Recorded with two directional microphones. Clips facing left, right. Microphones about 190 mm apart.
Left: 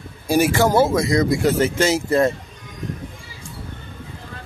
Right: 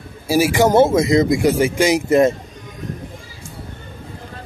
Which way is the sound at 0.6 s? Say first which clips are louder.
Right 4 dB; 20° right (ahead or behind).